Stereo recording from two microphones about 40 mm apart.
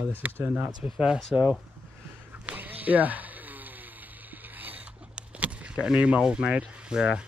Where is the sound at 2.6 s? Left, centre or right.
Right.